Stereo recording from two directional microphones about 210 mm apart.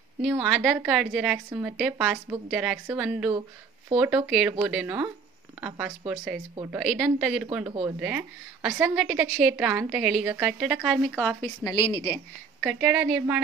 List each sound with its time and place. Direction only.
0.2 s a woman's voice: centre (ahead or behind)
6.5 s a woman's voice: 20° right (ahead or behind)
6.8 s a woman's voice: centre (ahead or behind)
11.6 s a woman's voice: 20° left (ahead or behind)
12.6 s a woman's voice: 5° right (ahead or behind)